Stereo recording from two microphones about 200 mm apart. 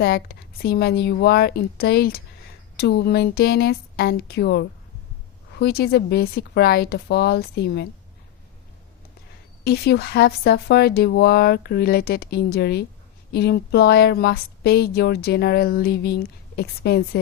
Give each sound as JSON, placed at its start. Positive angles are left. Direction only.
{"t": 0.0, "sound": "a woman's voice", "side_deg": 50}
{"t": 9.6, "sound": "a woman's voice", "side_deg": 55}